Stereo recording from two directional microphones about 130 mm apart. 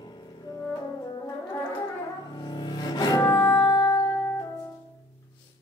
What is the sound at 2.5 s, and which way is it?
Music, 35° left (ahead or behind).